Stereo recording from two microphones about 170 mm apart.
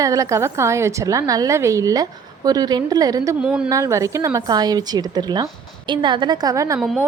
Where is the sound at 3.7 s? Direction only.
20° right (ahead or behind).